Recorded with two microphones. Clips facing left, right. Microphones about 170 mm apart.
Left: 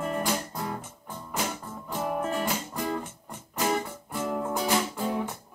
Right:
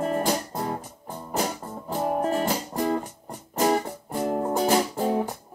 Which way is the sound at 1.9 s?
35° right (ahead or behind).